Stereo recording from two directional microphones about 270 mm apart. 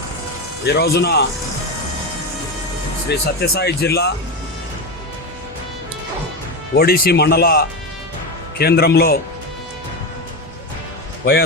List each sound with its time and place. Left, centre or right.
0.6 s speech: left
3.1 s speech: left
6.7 s speech: left